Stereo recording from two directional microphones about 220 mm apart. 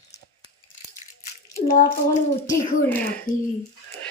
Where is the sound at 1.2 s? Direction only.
35° left (ahead or behind).